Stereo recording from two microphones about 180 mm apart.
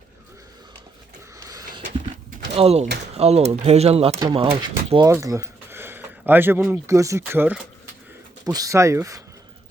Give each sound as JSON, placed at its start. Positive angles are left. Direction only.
{"t": 1.5, "sound": "a sound", "side_deg": -20}
{"t": 2.5, "sound": "speech", "side_deg": -35}
{"t": 5.0, "sound": "speech", "side_deg": -20}